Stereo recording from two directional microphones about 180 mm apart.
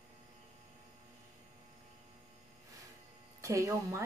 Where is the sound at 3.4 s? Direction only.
15° right (ahead or behind).